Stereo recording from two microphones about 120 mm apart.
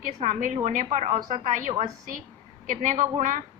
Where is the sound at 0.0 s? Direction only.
90° right.